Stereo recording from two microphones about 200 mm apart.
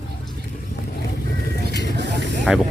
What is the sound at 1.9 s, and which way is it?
Vehicle, 60° right (ahead or behind).